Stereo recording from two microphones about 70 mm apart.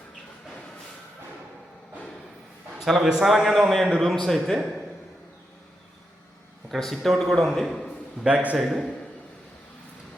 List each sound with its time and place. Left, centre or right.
2.7 s a man's voice: centre
6.7 s a man's voice: centre
8.2 s a man's voice: centre
8.5 s a man's voice: centre